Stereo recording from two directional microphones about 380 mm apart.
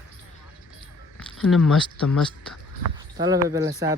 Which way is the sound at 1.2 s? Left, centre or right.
Centre.